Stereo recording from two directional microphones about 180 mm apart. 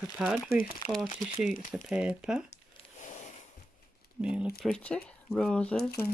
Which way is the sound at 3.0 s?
40° left (ahead or behind).